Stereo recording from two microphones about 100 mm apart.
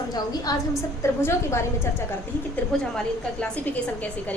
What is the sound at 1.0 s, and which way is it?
Speech, 25° left (ahead or behind).